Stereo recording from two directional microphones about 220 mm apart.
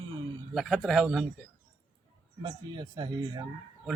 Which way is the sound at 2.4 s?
20° right (ahead or behind).